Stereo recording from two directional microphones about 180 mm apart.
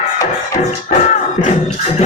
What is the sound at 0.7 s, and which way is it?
Music, 35° left (ahead or behind).